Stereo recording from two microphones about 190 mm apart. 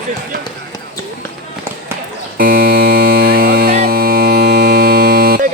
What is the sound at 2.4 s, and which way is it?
Music, 50° right (ahead or behind).